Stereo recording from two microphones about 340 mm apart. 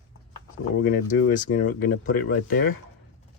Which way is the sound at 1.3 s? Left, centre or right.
Left.